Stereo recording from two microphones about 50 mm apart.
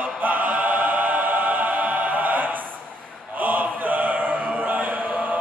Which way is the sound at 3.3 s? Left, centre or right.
Right.